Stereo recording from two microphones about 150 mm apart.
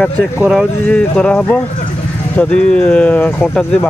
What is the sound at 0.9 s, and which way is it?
Speech, 5° left (ahead or behind).